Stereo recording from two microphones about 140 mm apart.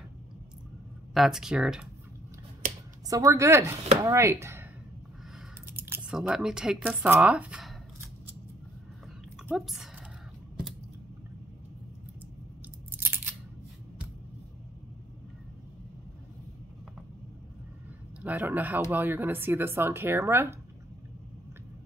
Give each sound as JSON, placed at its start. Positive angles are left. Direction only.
{"t": 1.1, "sound": "speech", "side_deg": 0}
{"t": 3.1, "sound": "speech", "side_deg": -25}
{"t": 5.8, "sound": "speech", "side_deg": -15}
{"t": 9.4, "sound": "speech", "side_deg": 0}
{"t": 12.9, "sound": "scissors", "side_deg": -15}
{"t": 18.2, "sound": "speech", "side_deg": -10}